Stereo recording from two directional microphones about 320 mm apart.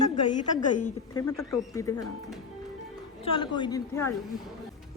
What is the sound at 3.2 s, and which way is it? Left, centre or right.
Speech, centre.